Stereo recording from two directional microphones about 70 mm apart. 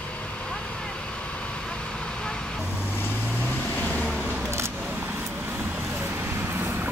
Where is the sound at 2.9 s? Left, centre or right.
Left.